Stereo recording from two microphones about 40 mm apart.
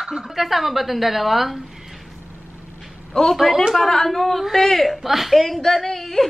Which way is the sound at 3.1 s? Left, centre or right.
Left.